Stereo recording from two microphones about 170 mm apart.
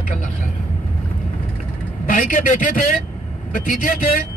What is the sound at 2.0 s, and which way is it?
A man's voice, 50° left (ahead or behind).